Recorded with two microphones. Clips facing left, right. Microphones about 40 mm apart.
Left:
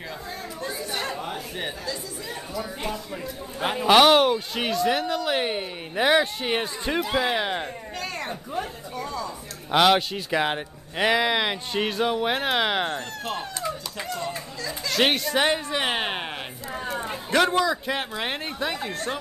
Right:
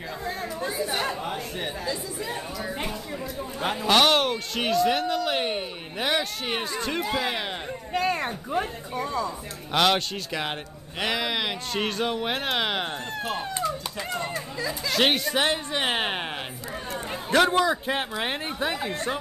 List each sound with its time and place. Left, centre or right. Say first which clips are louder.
1.1 s chatter: right 1 dB; centre
3.6 s speech: left 4 dB; centre
7.9 s speech: right 10 dB; centre
9.7 s speech: left 3 dB; centre
12.9 s speech: even; centre
14.9 s speech: left 1 dB; centre
16.9 s a sound: right 1 dB; centre
17.6 s speech: even; right
18.1 s speech: even; centre